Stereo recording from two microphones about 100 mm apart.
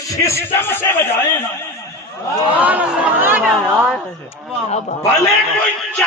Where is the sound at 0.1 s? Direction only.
30° left (ahead or behind).